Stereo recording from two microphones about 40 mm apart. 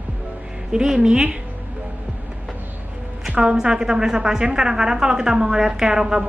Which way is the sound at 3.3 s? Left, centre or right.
Right.